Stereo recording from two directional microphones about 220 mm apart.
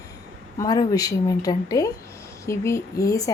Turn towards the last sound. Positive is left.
turn(degrees=15)  # may be behind; listen again after turning